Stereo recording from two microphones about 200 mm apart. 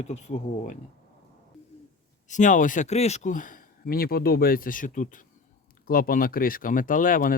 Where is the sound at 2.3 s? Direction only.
40° left (ahead or behind).